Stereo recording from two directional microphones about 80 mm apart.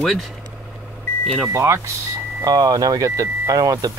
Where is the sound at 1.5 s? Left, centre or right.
Right.